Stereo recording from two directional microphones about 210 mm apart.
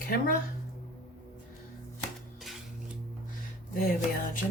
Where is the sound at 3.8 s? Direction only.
40° left (ahead or behind).